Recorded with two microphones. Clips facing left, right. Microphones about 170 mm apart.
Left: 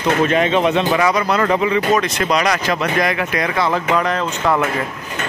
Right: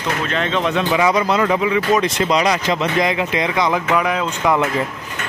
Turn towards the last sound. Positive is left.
turn(degrees=-10)  # may be behind; listen again after turning